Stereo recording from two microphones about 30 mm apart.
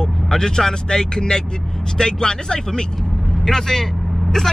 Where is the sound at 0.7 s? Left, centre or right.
Left.